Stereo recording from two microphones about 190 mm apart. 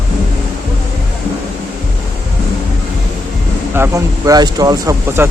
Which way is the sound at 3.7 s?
15° right (ahead or behind).